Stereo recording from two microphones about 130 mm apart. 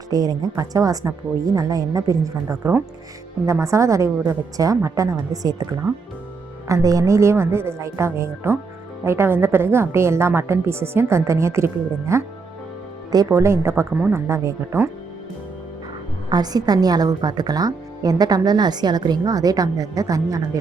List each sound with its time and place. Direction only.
0.1 s a woman's voice: 30° right (ahead or behind)
6.7 s a woman's voice: 25° right (ahead or behind)
16.3 s a woman's voice: 30° right (ahead or behind)